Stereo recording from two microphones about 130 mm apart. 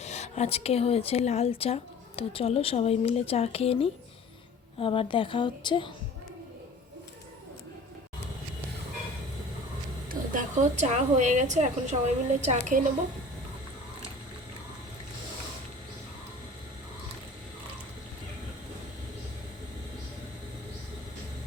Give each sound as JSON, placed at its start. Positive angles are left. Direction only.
{"t": 0.0, "sound": "a woman's voice", "side_deg": 60}
{"t": 10.1, "sound": "a woman's voice", "side_deg": -80}